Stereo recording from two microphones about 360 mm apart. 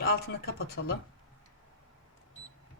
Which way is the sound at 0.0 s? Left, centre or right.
Left.